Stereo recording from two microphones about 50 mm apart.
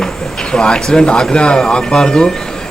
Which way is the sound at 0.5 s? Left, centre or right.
Centre.